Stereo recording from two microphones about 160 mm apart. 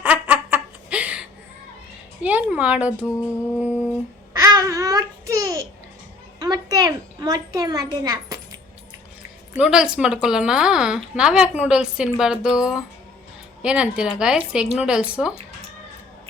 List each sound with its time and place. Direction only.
0.0 s a sound: 10° right (ahead or behind)
2.2 s speech: 10° right (ahead or behind)
4.4 s babbling: 20° right (ahead or behind)
6.4 s a child's voice: 25° right (ahead or behind)
9.6 s speech: 5° right (ahead or behind)